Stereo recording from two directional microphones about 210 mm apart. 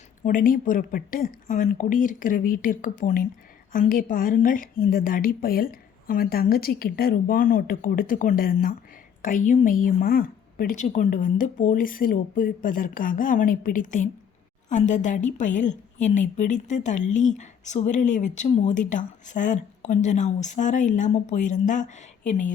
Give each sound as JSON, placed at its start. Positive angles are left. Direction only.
{"t": 0.2, "sound": "a woman's voice", "side_deg": 40}